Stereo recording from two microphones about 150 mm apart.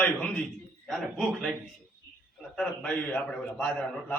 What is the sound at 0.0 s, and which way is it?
A man's voice, 5° left (ahead or behind).